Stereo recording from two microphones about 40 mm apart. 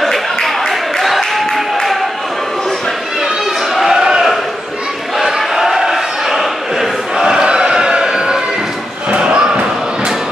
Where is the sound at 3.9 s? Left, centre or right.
Centre.